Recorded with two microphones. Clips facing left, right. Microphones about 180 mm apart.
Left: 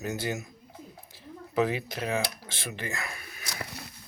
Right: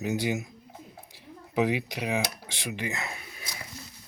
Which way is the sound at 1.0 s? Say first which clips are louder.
Left 3 dB; 15° right (ahead or behind).